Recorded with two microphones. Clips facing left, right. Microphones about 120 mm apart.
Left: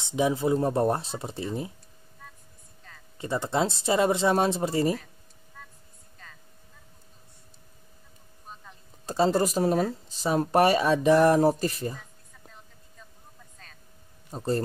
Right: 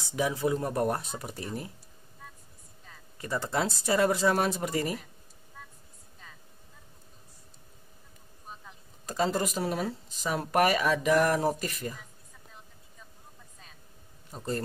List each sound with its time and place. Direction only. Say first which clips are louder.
0.0 s speech: left 4 dB; 20° left (ahead or behind)
2.9 s a sound: left 1 dB; 5° right (ahead or behind)
3.2 s speech: left 4 dB; 25° left (ahead or behind)
9.0 s speech: left 5 dB; 30° left (ahead or behind)
13.6 s vehicle: left 2 dB; 5° right (ahead or behind)
14.3 s speech: left 6 dB; 35° left (ahead or behind)